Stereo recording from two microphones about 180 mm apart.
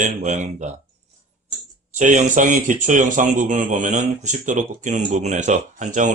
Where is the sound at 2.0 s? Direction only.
45° right (ahead or behind).